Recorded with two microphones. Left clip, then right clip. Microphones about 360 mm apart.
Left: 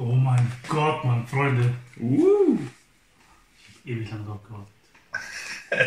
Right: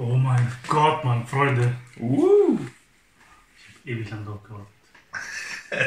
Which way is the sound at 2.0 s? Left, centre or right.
Right.